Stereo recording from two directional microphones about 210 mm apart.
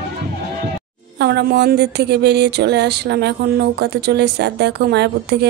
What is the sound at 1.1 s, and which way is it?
Speech, 55° right (ahead or behind).